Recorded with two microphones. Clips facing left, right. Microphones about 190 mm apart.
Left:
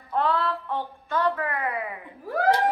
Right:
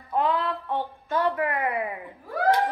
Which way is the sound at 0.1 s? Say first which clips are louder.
Even; 15° right (ahead or behind).